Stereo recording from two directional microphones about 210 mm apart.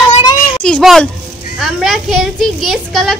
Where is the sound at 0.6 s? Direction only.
Centre (ahead or behind).